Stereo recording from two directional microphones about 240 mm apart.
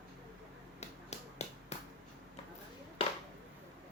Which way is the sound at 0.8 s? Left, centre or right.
Left.